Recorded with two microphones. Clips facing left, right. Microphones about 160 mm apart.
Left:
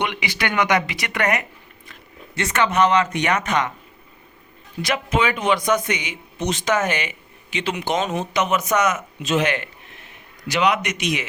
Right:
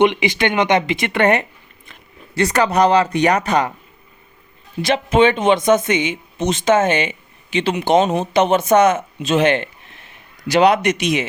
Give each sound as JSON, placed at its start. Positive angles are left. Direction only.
{"t": 0.0, "sound": "speech", "side_deg": -20}
{"t": 4.8, "sound": "speech", "side_deg": -25}